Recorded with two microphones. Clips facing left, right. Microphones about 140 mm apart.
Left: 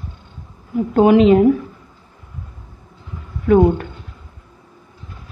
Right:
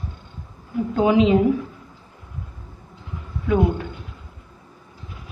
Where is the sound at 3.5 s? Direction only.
55° left (ahead or behind).